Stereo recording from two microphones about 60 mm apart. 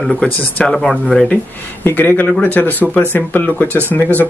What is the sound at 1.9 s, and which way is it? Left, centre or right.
Speech, left.